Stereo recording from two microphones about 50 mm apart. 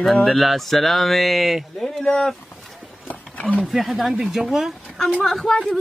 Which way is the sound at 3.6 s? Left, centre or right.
Centre.